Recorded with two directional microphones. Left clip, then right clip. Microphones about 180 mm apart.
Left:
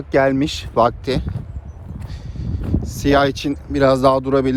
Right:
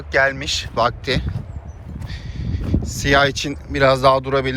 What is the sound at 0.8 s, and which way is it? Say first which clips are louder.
Speech: left 3 dB; 30° left (ahead or behind).